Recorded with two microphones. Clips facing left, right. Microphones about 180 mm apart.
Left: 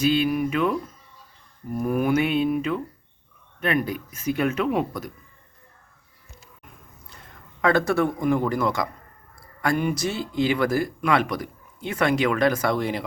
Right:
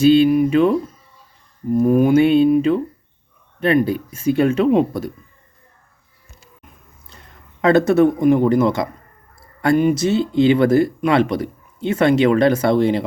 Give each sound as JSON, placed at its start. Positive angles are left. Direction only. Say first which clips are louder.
{"t": 0.0, "sound": "speech", "louder": "right 9 dB", "side_deg": -30}
{"t": 7.6, "sound": "speech", "louder": "right 8 dB", "side_deg": -25}